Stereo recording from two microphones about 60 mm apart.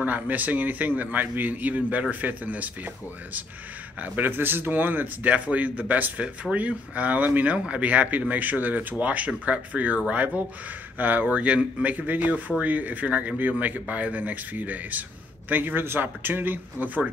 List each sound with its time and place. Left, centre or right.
0.0 s a man's voice: right
4.0 s a man's voice: right
6.1 s a man's voice: centre; by 17.0 s right